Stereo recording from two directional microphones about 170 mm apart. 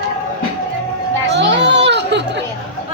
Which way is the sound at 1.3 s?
90° right.